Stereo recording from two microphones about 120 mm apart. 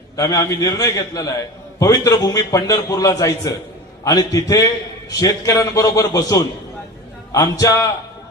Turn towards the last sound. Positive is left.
turn(degrees=30)  # may be behind; listen again after turning